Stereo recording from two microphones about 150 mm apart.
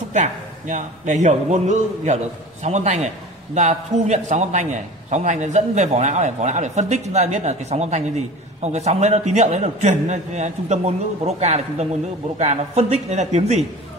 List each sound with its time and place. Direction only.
0.1 s a man's voice: 55° right (ahead or behind)